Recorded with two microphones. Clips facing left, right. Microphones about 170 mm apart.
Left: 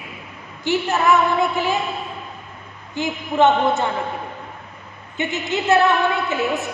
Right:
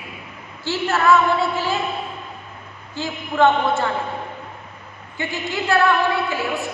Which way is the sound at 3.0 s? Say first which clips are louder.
Left 1 dB; 20° left (ahead or behind).